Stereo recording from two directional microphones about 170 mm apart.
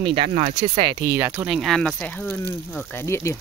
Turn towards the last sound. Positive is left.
turn(degrees=15)  # may be behind; listen again after turning